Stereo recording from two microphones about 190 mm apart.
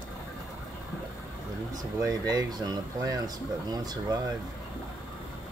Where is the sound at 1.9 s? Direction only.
15° right (ahead or behind).